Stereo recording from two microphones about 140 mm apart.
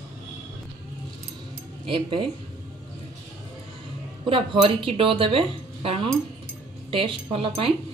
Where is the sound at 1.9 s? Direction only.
35° right (ahead or behind).